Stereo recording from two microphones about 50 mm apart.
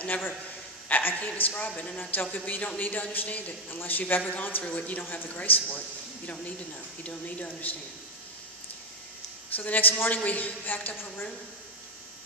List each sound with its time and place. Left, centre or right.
0.0 s speech: left
1.7 s speech: left
2.0 s speech: left
9.6 s speech: left